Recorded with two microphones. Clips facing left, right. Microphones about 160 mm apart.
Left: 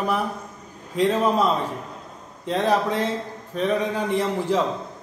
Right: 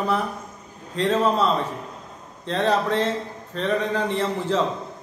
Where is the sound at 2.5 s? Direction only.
10° left (ahead or behind).